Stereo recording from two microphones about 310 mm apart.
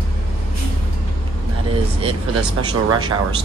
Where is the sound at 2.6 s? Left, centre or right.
Centre.